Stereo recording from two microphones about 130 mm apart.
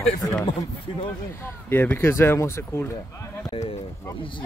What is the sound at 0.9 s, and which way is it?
Speech, 40° left (ahead or behind).